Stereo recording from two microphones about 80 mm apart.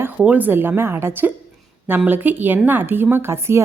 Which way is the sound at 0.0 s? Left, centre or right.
Right.